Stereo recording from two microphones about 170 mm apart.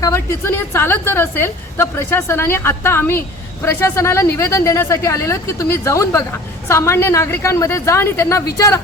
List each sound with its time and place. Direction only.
0.0 s a woman's voice: 15° left (ahead or behind)